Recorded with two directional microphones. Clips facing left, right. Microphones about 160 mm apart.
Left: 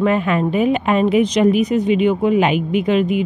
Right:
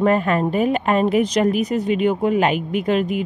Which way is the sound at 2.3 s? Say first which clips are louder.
Left 3 dB; 40° right (ahead or behind).